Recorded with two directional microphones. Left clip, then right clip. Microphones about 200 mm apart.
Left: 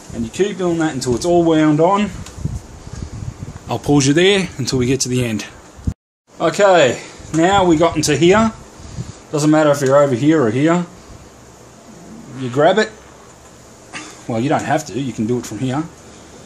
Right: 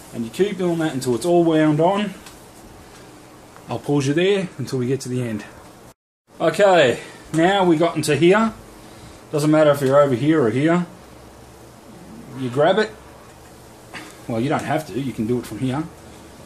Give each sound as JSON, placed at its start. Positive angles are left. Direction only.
{"t": 0.4, "sound": "speech", "side_deg": 30}
{"t": 3.6, "sound": "speech", "side_deg": 45}
{"t": 6.3, "sound": "speech", "side_deg": 30}
{"t": 12.4, "sound": "speech", "side_deg": 35}
{"t": 13.9, "sound": "speech", "side_deg": 35}